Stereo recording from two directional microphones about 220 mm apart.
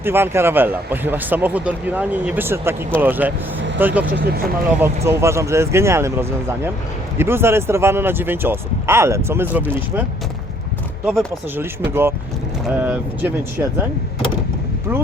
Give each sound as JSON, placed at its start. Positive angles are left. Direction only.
{"t": 0.0, "sound": "speech", "side_deg": -10}
{"t": 4.1, "sound": "speech", "side_deg": -45}
{"t": 5.0, "sound": "speech", "side_deg": -10}
{"t": 11.0, "sound": "speech", "side_deg": 0}
{"t": 14.9, "sound": "speech", "side_deg": -10}